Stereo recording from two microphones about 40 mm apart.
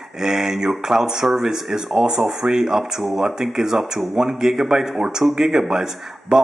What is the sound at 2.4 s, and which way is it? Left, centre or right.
A man's voice, centre.